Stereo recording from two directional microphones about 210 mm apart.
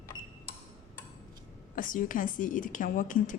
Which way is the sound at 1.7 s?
40° left (ahead or behind).